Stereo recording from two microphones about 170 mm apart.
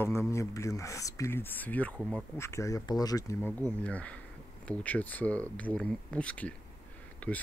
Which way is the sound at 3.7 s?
10° left (ahead or behind).